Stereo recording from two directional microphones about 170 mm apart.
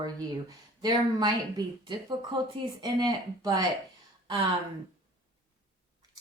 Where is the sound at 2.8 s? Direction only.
25° right (ahead or behind).